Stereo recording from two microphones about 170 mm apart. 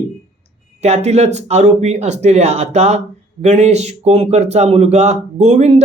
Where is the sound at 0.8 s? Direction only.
40° right (ahead or behind).